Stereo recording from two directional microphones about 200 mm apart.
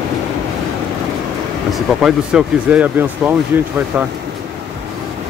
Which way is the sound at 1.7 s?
Centre (ahead or behind).